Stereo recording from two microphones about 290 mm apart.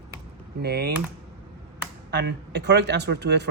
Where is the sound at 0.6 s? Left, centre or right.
Right.